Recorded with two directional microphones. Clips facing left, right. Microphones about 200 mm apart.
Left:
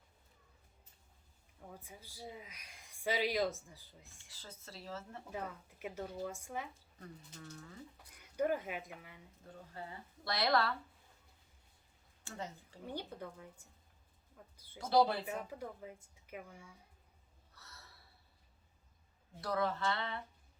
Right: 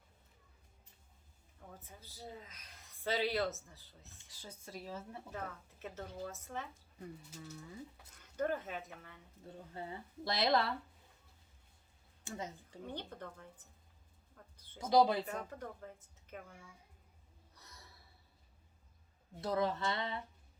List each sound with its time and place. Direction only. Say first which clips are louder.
1.8 s speech: even; 10° left (ahead or behind)
4.3 s speech: right 4 dB; 15° right (ahead or behind)
5.8 s speech: left 3 dB; 10° left (ahead or behind)
7.0 s speech: right 3 dB; 5° right (ahead or behind)
8.1 s speech: left 2 dB; 10° left (ahead or behind)
10.2 s speech: right 1 dB; 20° right (ahead or behind)
12.2 s speech: right 1 dB; 15° right (ahead or behind)
12.9 s speech: left 3 dB; 10° left (ahead or behind)
14.3 s a sound: left 2 dB; 10° left (ahead or behind)
14.8 s speech: right 1 dB; 15° right (ahead or behind)
15.3 s speech: left 1 dB; 10° left (ahead or behind)
17.5 s a sound: even; 15° right (ahead or behind)
19.4 s speech: right 1 dB; 20° right (ahead or behind)